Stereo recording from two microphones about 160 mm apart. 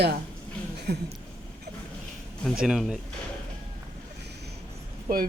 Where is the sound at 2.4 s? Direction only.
Centre (ahead or behind).